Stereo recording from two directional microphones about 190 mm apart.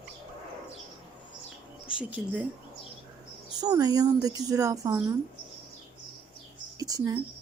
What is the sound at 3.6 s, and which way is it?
Speech, 20° right (ahead or behind).